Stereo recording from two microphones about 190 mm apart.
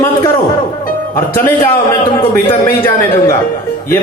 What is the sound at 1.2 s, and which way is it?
A man's voice, 15° left (ahead or behind).